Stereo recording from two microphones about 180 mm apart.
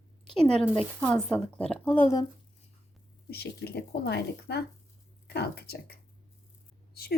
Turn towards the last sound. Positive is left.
turn(degrees=60)  # may be behind; listen again after turning